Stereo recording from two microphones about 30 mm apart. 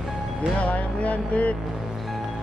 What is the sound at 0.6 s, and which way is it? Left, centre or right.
Music, left.